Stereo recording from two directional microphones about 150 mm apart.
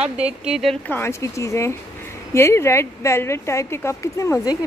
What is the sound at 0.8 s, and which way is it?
Speech, 15° left (ahead or behind).